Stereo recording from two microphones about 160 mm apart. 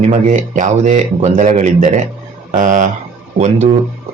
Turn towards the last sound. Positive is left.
turn(degrees=-45)  # may be behind; listen again after turning